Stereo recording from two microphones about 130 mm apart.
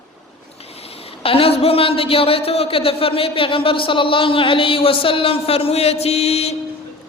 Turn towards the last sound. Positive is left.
turn(degrees=50)  # may be behind; listen again after turning